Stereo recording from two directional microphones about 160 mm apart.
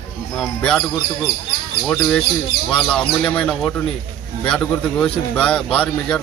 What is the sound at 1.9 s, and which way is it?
Speech, 5° left (ahead or behind).